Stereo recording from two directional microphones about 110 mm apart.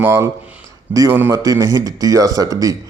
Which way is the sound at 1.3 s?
35° right (ahead or behind).